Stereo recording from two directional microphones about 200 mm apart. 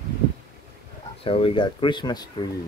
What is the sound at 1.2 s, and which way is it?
Speech, 25° left (ahead or behind).